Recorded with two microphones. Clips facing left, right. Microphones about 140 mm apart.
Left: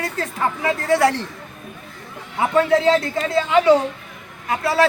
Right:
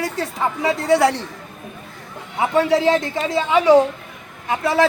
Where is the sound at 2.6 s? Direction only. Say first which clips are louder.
Even; 15° right (ahead or behind).